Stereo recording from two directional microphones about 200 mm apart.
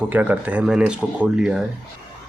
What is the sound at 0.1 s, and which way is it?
Speech, 10° right (ahead or behind).